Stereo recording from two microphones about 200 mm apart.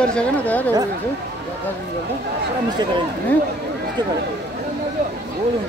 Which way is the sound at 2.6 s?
20° right (ahead or behind).